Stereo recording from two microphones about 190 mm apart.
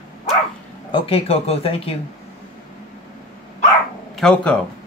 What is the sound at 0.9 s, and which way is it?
Speech, 30° left (ahead or behind).